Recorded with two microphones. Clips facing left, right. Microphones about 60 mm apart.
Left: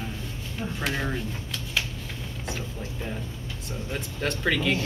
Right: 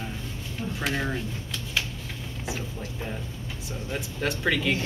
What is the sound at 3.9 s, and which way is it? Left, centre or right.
Speech, centre.